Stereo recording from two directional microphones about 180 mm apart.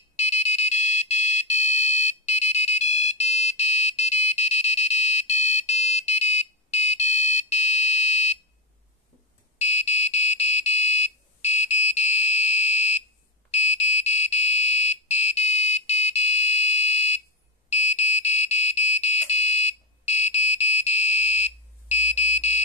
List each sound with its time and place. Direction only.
0.1 s alarm: 40° left (ahead or behind)
9.6 s buzzer: 40° left (ahead or behind)
13.5 s alarm: 35° left (ahead or behind)